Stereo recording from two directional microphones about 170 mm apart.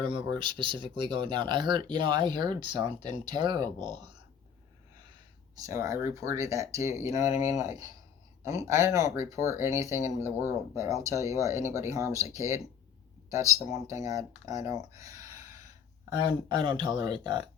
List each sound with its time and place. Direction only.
0.0 s speech: 30° right (ahead or behind)
5.5 s speech: 20° right (ahead or behind)
16.5 s speech: 25° right (ahead or behind)